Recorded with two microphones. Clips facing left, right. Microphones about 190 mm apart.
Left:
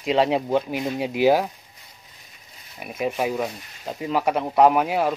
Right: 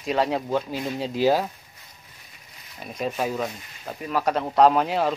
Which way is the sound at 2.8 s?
10° left (ahead or behind).